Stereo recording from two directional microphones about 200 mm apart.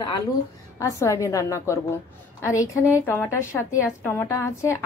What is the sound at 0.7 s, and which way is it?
A woman's voice, 15° left (ahead or behind).